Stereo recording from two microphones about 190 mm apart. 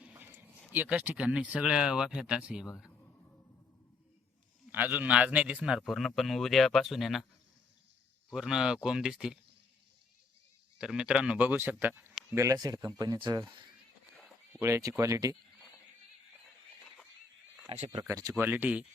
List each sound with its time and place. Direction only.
0.0 s speech: 10° right (ahead or behind)
4.7 s a man's voice: 10° right (ahead or behind)
8.3 s a man's voice: 5° right (ahead or behind)
10.8 s a man's voice: 5° right (ahead or behind)
12.3 s speech: 15° right (ahead or behind)
14.6 s speech: 15° right (ahead or behind)
17.7 s speech: 30° right (ahead or behind)
17.9 s speech: 15° right (ahead or behind)